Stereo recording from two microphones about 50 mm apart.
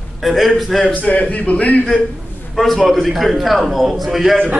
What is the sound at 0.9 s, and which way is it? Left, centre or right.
A man's voice, left.